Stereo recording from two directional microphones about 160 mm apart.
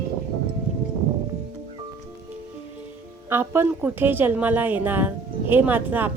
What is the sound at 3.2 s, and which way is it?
A woman's voice, 15° right (ahead or behind).